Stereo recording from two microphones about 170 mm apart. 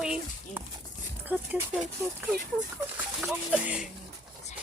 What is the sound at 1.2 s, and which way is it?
Speech, 10° right (ahead or behind).